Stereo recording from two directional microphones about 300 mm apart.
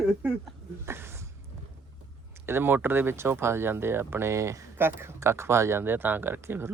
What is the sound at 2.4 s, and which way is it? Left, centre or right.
Speech, centre.